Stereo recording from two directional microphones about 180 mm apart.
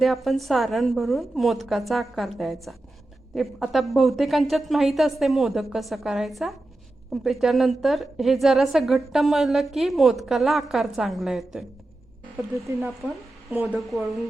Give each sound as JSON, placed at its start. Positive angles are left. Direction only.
{"t": 0.0, "sound": "a woman's voice", "side_deg": 0}
{"t": 12.5, "sound": "speech", "side_deg": -15}